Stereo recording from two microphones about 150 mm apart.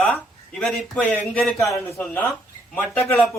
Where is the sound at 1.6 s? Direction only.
20° left (ahead or behind).